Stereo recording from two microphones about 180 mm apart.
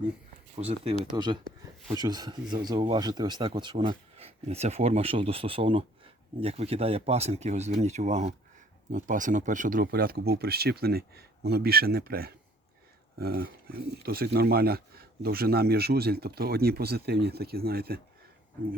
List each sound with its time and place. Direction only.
0.5 s speech: 35° right (ahead or behind); by 18.0 s 60° right (ahead or behind)